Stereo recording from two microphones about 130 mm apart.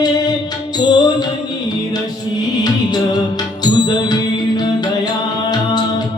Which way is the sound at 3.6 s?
35° left (ahead or behind).